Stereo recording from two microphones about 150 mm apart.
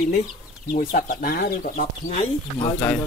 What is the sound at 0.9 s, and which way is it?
Speech, 70° left (ahead or behind).